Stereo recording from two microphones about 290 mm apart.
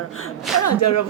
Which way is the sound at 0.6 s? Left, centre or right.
Left.